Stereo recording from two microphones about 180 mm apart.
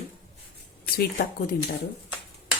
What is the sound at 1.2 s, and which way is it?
Speech, 65° left (ahead or behind).